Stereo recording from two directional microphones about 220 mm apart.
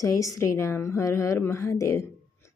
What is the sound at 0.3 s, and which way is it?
Speech, 15° left (ahead or behind).